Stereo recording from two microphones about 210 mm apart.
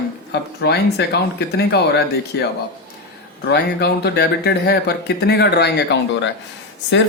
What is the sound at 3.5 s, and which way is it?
Speech, 50° left (ahead or behind).